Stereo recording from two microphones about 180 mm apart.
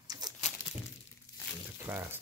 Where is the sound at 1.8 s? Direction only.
15° right (ahead or behind).